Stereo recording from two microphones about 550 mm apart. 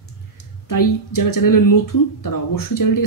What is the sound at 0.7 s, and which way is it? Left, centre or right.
Speech, left.